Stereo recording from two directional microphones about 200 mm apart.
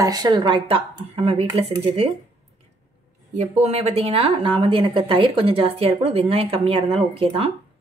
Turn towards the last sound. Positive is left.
turn(degrees=-30)  # may be behind; listen again after turning